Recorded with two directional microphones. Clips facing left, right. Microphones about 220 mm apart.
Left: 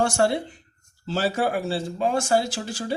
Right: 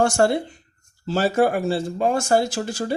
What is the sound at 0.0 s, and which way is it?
Speech, 50° right (ahead or behind).